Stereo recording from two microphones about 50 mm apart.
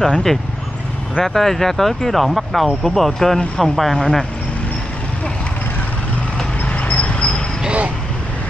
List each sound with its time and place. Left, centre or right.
0.0 s speech: centre
6.6 s a sound: left
7.6 s vehicle: right